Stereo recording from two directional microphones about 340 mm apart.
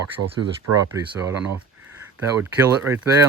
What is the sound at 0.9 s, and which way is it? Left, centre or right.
Speech, centre.